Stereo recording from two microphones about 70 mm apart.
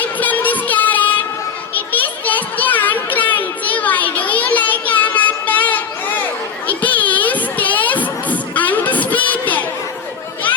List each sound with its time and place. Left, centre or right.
0.0 s music: left
1.7 s children playing: left
6.7 s a sound: left